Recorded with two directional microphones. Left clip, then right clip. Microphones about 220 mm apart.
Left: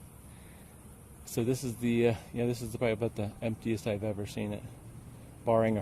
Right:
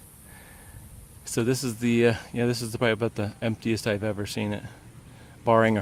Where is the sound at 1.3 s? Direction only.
25° right (ahead or behind).